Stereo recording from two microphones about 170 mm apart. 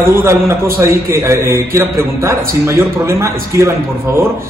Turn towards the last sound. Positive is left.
turn(degrees=-15)  # may be behind; listen again after turning